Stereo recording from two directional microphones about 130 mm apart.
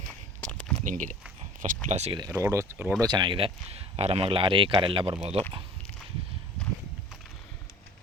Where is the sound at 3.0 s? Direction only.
35° right (ahead or behind).